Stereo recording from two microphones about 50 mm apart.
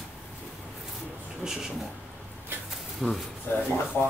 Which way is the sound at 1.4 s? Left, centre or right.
Centre.